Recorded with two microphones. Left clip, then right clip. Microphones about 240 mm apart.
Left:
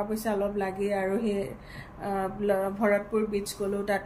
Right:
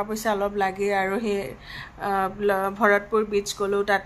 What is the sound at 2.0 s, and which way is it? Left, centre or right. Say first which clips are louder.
Speech: right 6 dB; right.